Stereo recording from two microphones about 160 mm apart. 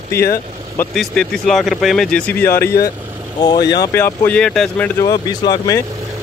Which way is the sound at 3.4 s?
25° left (ahead or behind).